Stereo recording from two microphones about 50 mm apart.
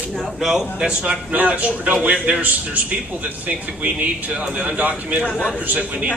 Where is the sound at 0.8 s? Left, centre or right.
Right.